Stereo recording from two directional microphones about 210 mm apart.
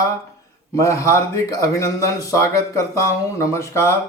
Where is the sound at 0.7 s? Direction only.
15° left (ahead or behind).